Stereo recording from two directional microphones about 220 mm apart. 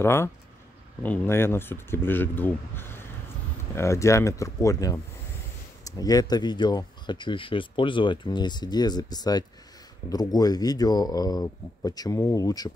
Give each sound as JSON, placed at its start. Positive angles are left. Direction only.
{"t": 0.0, "sound": "speech", "side_deg": 10}